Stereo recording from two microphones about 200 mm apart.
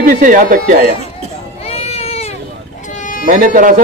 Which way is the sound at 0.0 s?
45° right (ahead or behind).